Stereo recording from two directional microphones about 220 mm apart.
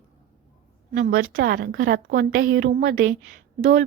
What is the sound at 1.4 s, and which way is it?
A woman's voice, 45° right (ahead or behind).